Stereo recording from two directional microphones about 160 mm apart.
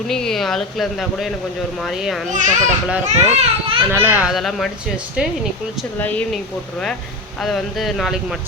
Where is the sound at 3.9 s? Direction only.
15° right (ahead or behind).